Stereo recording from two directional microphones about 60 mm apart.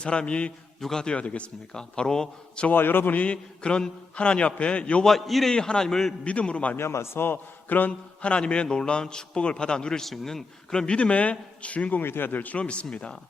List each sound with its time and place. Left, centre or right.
0.0 s a man's voice: centre
2.6 s a man's voice: left
3.3 s a man's voice: centre
5.0 s a man's voice: centre
6.2 s a man's voice: centre
6.7 s a man's voice: left
12.0 s a man's voice: left; by 13.1 s centre